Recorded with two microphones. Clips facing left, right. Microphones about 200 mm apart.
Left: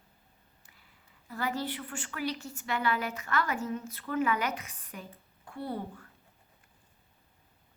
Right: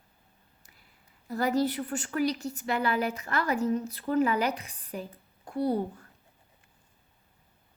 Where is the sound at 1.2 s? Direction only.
40° right (ahead or behind).